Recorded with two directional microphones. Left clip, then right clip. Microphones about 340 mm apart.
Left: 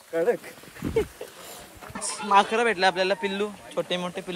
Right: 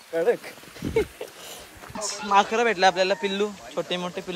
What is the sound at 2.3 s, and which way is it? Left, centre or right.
Speech, centre.